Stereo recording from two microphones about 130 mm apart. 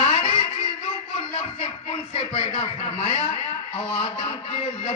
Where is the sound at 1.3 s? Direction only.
50° left (ahead or behind).